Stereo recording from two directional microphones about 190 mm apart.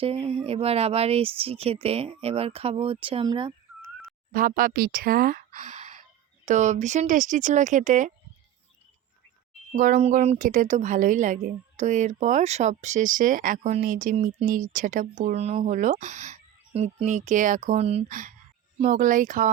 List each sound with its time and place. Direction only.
0.0 s a woman's voice: 30° right (ahead or behind)
4.3 s a woman's voice: 45° right (ahead or behind)
9.7 s a woman's voice: 45° right (ahead or behind)